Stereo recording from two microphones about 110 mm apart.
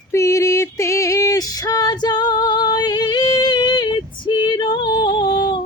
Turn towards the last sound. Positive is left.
turn(degrees=40)  # may be behind; listen again after turning